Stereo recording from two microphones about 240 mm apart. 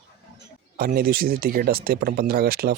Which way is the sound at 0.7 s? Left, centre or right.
Right.